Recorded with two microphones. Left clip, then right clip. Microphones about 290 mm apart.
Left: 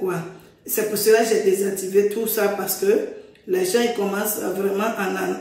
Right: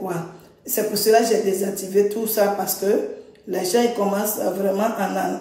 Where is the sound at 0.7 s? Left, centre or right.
Centre.